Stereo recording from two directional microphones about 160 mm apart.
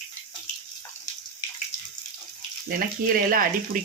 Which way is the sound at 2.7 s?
65° right (ahead or behind).